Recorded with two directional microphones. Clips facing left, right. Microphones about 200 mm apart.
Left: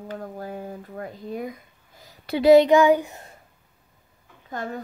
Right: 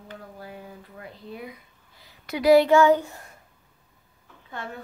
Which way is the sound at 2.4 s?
20° left (ahead or behind).